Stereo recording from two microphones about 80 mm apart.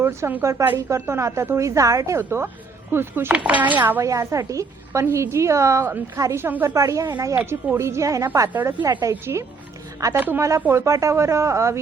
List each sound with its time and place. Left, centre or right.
0.0 s a woman's voice: right
2.1 s a woman's voice: right
3.3 s speech: centre
4.0 s a woman's voice: right
6.4 s speech: right
6.7 s a woman's voice: right
7.3 s a woman's voice: right
10.2 s speech: right
10.7 s a woman's voice: right